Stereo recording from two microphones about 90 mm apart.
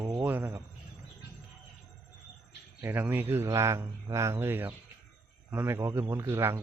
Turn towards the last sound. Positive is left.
turn(degrees=-30)  # may be behind; listen again after turning